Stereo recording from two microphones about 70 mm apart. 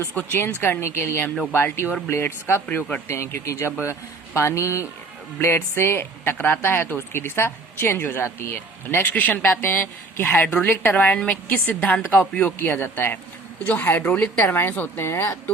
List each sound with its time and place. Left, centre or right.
0.1 s speech: left
12.5 s speech: left